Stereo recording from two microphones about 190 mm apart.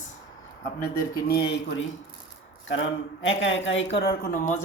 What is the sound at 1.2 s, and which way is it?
Speech, 60° left (ahead or behind).